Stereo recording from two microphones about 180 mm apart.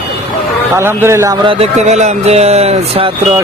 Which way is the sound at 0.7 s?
15° right (ahead or behind).